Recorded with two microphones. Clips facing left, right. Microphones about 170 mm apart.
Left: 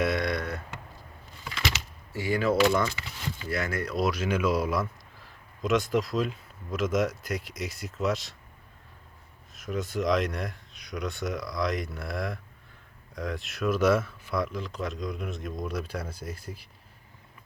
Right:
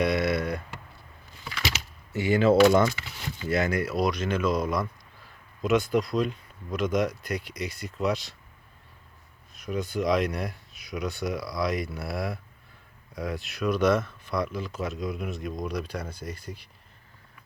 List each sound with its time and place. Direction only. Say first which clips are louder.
0.0 s a sound: right 3 dB; centre (ahead or behind)
2.1 s speech: right 5 dB; 20° right (ahead or behind)
3.9 s speech: right 1 dB; 5° left (ahead or behind)
9.6 s speech: right 1 dB; centre (ahead or behind)